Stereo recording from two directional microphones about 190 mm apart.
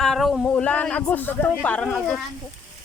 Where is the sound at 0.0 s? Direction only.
Centre (ahead or behind).